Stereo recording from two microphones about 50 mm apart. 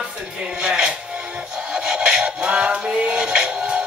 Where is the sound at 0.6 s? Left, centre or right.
Centre.